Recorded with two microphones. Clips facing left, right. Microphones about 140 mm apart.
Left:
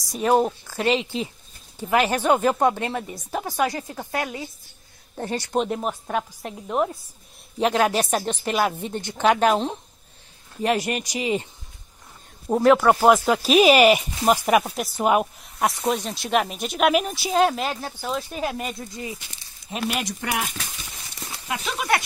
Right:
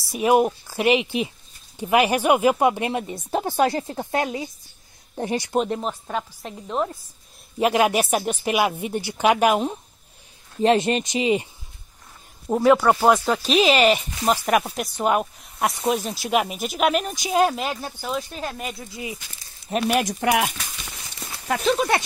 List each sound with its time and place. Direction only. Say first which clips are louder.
0.1 s a woman's voice: right 2 dB; 10° right (ahead or behind)
5.8 s a woman's voice: left 1 dB; 10° left (ahead or behind)
7.5 s a woman's voice: right 1 dB; 10° right (ahead or behind)
10.6 s speech: right 5 dB; 25° right (ahead or behind)
12.4 s speech: even; centre (ahead or behind)
19.7 s speech: right 6 dB; 55° right (ahead or behind)
21.5 s speech: right 4 dB; 30° right (ahead or behind)